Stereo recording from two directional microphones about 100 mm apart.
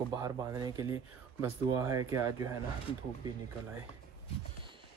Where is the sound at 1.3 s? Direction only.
25° right (ahead or behind).